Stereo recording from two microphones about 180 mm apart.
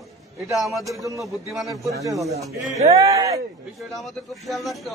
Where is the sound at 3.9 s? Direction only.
Centre (ahead or behind).